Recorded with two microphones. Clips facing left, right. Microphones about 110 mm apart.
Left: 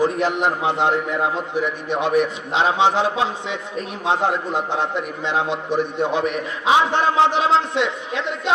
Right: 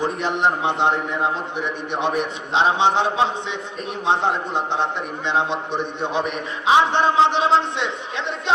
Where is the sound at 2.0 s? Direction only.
25° right (ahead or behind).